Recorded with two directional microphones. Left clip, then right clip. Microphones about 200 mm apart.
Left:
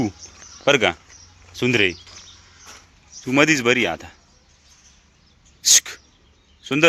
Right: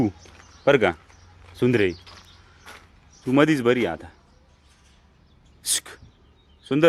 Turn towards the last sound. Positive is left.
turn(degrees=-10)  # may be behind; listen again after turning